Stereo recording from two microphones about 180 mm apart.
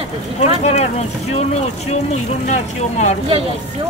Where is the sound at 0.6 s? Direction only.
35° left (ahead or behind).